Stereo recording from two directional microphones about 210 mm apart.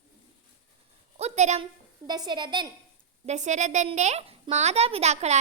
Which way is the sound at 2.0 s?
20° right (ahead or behind).